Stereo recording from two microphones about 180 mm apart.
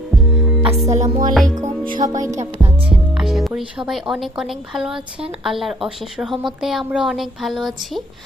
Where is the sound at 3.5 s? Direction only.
5° right (ahead or behind).